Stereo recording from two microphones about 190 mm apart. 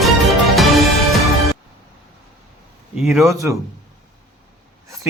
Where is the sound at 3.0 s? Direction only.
Centre (ahead or behind).